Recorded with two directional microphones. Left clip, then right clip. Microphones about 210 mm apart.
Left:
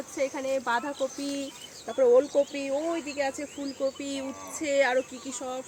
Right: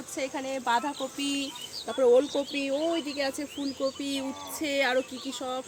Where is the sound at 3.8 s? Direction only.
55° right (ahead or behind).